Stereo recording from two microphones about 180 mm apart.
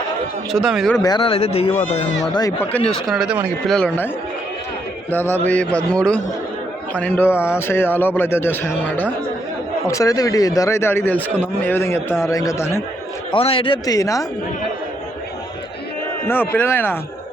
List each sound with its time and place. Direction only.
0.5 s speech: centre (ahead or behind)
1.0 s speech: 25° left (ahead or behind)
2.6 s speech: 5° left (ahead or behind)
3.8 s a man's voice: 10° left (ahead or behind)
5.1 s a man's voice: 10° left (ahead or behind)
13.3 s speech: 30° left (ahead or behind)
16.2 s a man's voice: 10° left (ahead or behind)